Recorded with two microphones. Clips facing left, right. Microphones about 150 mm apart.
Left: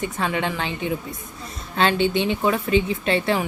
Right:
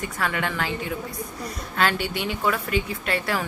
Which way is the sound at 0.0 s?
20° left (ahead or behind).